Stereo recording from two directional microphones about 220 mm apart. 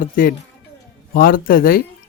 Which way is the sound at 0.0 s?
40° left (ahead or behind).